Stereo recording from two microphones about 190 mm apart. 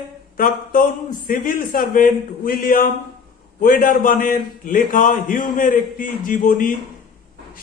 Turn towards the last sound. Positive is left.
turn(degrees=45)  # may be behind; listen again after turning